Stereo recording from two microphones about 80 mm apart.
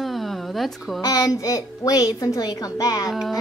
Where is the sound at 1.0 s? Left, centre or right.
Left.